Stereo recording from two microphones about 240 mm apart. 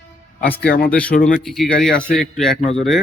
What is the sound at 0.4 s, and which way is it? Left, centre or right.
A man's voice, centre.